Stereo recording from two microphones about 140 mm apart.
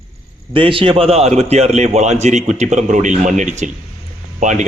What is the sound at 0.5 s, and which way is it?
A man's voice, 40° right (ahead or behind).